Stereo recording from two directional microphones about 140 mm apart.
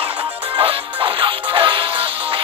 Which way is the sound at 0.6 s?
35° right (ahead or behind).